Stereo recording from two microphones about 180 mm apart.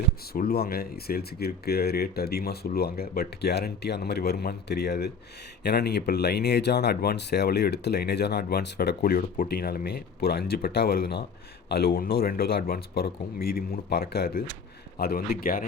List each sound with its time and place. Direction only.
0.3 s speech: 60° left (ahead or behind)